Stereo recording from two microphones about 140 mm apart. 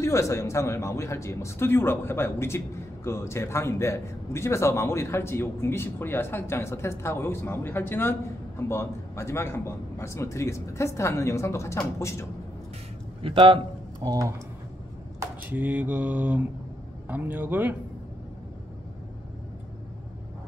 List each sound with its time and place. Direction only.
0.0 s speech: 20° left (ahead or behind)
13.2 s a man's voice: 40° right (ahead or behind)
14.0 s speech: 25° right (ahead or behind)
15.1 s speech: 10° right (ahead or behind)